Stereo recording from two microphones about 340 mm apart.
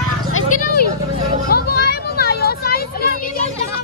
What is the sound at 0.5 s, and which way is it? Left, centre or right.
Vehicle, left.